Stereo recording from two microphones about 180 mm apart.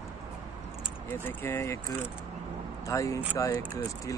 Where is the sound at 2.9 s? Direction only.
15° left (ahead or behind).